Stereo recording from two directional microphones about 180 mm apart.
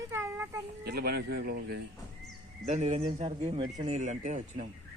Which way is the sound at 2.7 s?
40° right (ahead or behind).